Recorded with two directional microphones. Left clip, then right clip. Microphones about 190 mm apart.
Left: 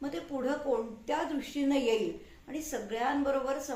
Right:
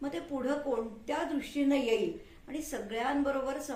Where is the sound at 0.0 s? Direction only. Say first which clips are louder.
Left 1 dB; 10° left (ahead or behind).